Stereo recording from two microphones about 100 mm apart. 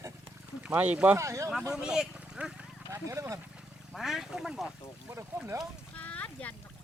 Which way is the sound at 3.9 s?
Centre (ahead or behind).